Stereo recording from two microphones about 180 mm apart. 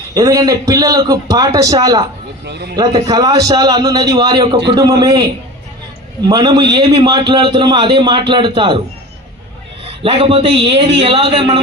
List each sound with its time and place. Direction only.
0.1 s a man's voice: 20° right (ahead or behind)
2.5 s speech: 65° right (ahead or behind)
2.7 s a man's voice: 20° right (ahead or behind)
9.8 s a man's voice: 30° right (ahead or behind)